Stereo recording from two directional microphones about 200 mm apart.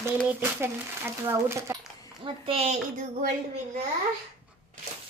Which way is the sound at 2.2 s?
30° right (ahead or behind).